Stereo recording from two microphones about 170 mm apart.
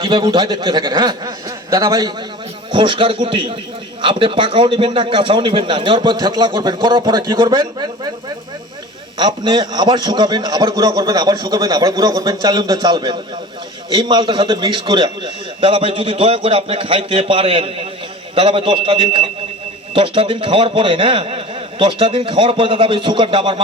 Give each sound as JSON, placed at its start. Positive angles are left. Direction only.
{"t": 0.0, "sound": "a man's voice", "side_deg": -25}
{"t": 9.1, "sound": "a man's voice", "side_deg": -25}